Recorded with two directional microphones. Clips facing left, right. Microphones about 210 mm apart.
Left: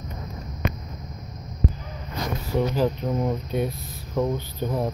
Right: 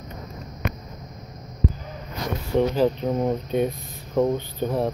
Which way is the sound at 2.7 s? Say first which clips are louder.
Right 2 dB; 20° right (ahead or behind).